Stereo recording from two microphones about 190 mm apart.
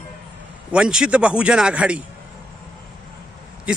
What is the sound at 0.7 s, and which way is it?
A man's voice, 5° right (ahead or behind).